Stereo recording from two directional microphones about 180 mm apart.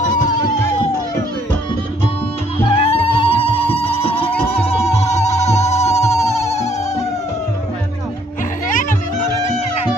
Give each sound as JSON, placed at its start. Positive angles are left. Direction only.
{"t": 2.6, "sound": "music", "side_deg": 30}
{"t": 8.6, "sound": "music", "side_deg": 45}